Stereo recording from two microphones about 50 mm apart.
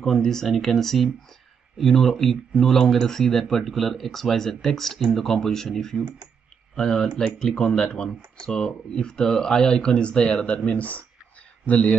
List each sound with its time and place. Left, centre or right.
0.0 s speech: centre; by 11.9 s left